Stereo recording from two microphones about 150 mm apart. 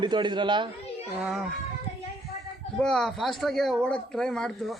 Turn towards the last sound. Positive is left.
turn(degrees=5)  # may be behind; listen again after turning